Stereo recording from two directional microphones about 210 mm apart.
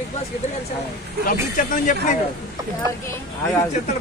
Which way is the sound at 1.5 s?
40° left (ahead or behind).